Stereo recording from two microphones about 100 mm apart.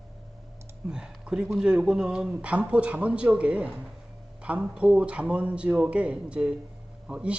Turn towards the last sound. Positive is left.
turn(degrees=-10)  # may be behind; listen again after turning